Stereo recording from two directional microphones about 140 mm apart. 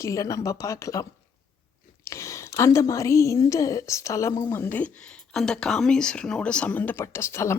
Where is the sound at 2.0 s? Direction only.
20° left (ahead or behind).